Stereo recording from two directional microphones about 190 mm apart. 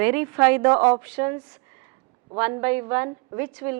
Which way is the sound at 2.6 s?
10° right (ahead or behind).